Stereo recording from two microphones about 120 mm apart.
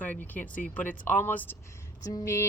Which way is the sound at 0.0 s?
15° left (ahead or behind).